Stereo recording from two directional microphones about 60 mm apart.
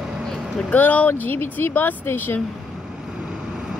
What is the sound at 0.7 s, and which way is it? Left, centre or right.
Speech, left.